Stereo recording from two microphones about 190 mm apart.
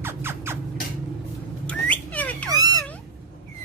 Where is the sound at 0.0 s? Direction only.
10° right (ahead or behind).